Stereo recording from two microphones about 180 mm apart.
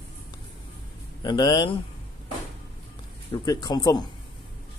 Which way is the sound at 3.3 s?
20° left (ahead or behind).